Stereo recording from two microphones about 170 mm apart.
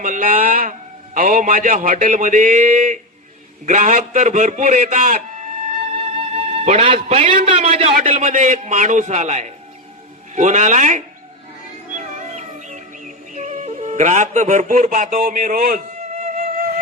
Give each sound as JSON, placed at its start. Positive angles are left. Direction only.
{"t": 0.0, "sound": "a man's voice", "side_deg": -50}
{"t": 5.9, "sound": "a man's voice", "side_deg": -35}
{"t": 11.9, "sound": "music", "side_deg": -45}